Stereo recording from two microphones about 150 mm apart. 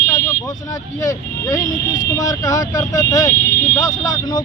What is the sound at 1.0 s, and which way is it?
Speech, 20° left (ahead or behind).